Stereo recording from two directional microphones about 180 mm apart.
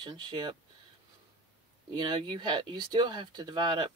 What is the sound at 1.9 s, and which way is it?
Speech, 25° right (ahead or behind).